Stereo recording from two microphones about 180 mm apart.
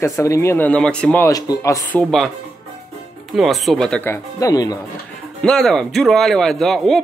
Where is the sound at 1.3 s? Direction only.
20° left (ahead or behind).